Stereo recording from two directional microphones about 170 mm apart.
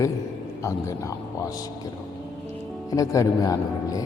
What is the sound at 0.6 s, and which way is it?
Speech, 20° left (ahead or behind).